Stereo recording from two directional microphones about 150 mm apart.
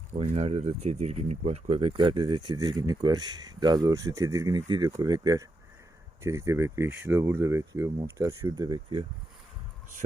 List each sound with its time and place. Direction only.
0.1 s speech: 45° right (ahead or behind)